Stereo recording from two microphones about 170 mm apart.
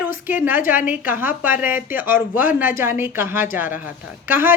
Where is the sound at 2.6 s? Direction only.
15° right (ahead or behind).